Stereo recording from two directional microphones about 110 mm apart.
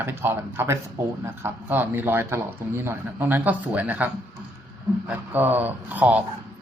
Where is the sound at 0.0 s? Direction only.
20° right (ahead or behind).